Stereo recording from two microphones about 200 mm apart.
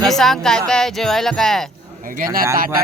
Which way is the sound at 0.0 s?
Centre (ahead or behind).